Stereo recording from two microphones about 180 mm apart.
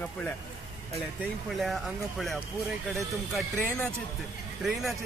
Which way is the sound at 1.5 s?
Centre (ahead or behind).